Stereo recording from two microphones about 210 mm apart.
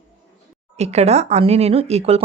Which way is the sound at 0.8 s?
30° right (ahead or behind).